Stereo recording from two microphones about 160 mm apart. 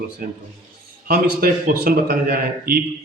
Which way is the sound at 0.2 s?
60° right (ahead or behind).